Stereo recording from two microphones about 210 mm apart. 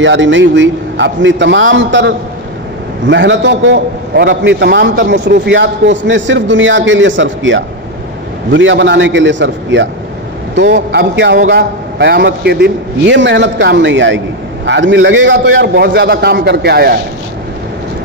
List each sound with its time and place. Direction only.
0.0 s a man's voice: 60° right (ahead or behind)